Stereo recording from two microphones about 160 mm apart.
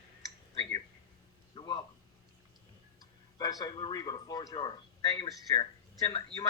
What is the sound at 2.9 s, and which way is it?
A man's voice, 25° left (ahead or behind).